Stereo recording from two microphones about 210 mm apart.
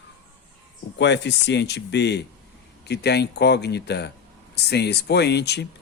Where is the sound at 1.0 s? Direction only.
55° left (ahead or behind).